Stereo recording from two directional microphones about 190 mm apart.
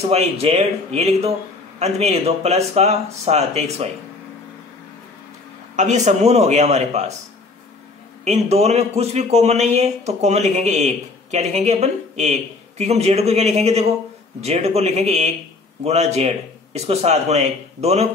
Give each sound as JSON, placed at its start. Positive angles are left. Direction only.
{"t": 0.1, "sound": "speech", "side_deg": -35}
{"t": 5.8, "sound": "speech", "side_deg": -40}
{"t": 8.3, "sound": "speech", "side_deg": -35}